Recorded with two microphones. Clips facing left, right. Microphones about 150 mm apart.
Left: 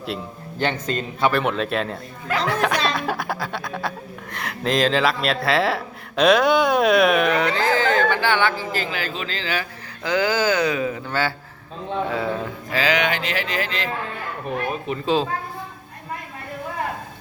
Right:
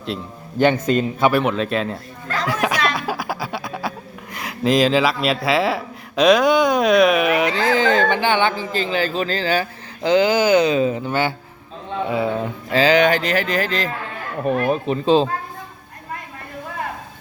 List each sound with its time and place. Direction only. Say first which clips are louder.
0.6 s speech: right 8 dB; 15° right (ahead or behind)
1.4 s speech: right 2 dB; centre (ahead or behind)
2.5 s snicker: right 1 dB; 5° right (ahead or behind)
2.9 s speech: even; 5° right (ahead or behind); by 11.3 s 20° right (ahead or behind)
12.7 s speech: right 7 dB; 30° right (ahead or behind)
14.5 s speech: right 8 dB; 60° right (ahead or behind)
14.8 s speech: right 4 dB; 30° right (ahead or behind)